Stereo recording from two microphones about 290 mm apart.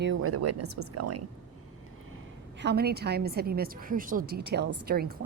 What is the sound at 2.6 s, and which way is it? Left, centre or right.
A woman's voice, right.